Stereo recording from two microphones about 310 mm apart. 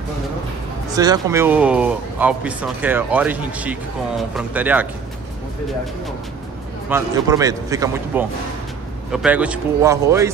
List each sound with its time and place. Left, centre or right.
0.8 s speech: centre
6.9 s a man's voice: centre